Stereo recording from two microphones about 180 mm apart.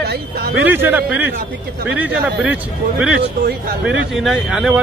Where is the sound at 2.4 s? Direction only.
5° right (ahead or behind).